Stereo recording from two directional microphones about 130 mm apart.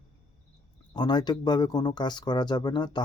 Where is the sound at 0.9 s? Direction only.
35° left (ahead or behind).